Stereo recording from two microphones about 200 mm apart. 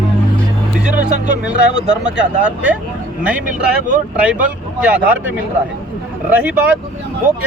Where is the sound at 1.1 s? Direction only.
35° right (ahead or behind).